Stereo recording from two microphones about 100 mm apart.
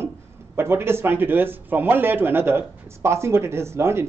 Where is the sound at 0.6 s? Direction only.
25° right (ahead or behind).